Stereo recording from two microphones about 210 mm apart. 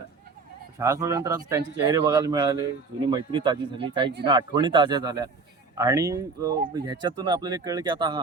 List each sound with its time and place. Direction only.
0.8 s speech: 15° right (ahead or behind)